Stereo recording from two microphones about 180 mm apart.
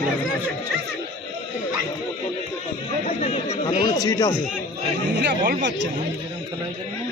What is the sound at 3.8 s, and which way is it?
Speech, 20° left (ahead or behind).